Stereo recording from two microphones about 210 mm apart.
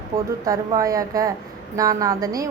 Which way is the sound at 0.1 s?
40° right (ahead or behind).